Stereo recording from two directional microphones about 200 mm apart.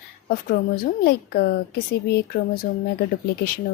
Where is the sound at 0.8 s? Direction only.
50° left (ahead or behind).